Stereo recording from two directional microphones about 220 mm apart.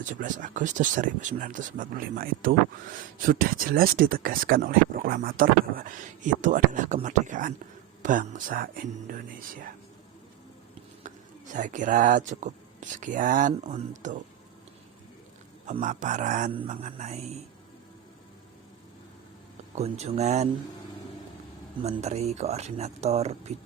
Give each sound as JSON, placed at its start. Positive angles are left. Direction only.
{"t": 0.0, "sound": "speech", "side_deg": -35}
{"t": 11.5, "sound": "speech", "side_deg": -35}
{"t": 15.6, "sound": "speech", "side_deg": -35}
{"t": 19.7, "sound": "speech", "side_deg": -30}
{"t": 21.8, "sound": "speech", "side_deg": -30}